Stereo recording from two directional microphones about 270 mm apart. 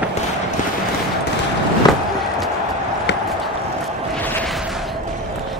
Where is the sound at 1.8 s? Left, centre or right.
Centre.